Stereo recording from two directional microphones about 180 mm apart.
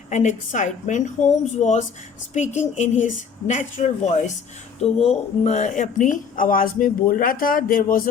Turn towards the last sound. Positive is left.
turn(degrees=50)  # may be behind; listen again after turning